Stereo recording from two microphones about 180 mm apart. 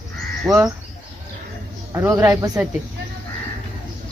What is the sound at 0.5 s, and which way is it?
Speech, 5° right (ahead or behind).